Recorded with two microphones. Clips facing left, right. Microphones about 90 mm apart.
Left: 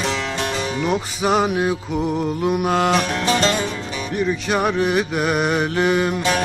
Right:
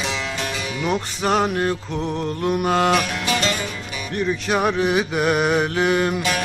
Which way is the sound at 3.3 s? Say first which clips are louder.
Left 4 dB; 35° left (ahead or behind).